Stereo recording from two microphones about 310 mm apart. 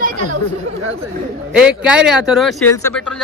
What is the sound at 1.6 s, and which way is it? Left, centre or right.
Speech, centre.